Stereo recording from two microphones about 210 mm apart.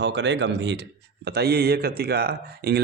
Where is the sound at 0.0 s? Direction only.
55° right (ahead or behind).